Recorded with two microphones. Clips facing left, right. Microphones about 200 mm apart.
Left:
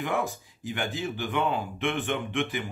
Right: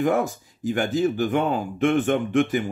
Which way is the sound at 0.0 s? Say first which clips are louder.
Right 8 dB; 45° right (ahead or behind).